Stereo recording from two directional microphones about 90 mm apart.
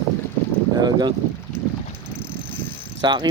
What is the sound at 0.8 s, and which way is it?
Speech, 55° right (ahead or behind).